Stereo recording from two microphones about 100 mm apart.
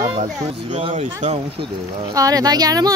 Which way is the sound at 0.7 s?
85° right.